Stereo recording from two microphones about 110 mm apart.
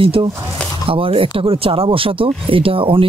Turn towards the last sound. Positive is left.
turn(degrees=-55)  # may be behind; listen again after turning